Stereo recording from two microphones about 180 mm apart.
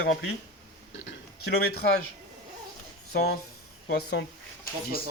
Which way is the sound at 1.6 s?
60° left (ahead or behind).